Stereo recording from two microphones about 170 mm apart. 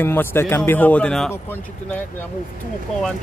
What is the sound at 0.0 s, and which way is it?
A man's voice, 15° left (ahead or behind).